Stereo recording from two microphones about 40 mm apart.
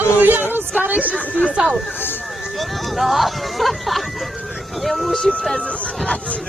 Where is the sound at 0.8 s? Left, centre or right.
Right.